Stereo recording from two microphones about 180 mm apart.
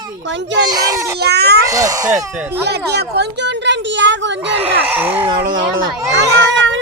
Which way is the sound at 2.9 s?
70° right (ahead or behind).